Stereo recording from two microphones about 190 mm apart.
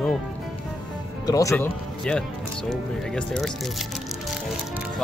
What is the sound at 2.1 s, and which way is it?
Speech, 5° left (ahead or behind).